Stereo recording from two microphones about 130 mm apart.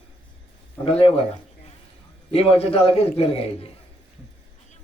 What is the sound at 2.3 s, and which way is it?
A man's voice, 50° left (ahead or behind).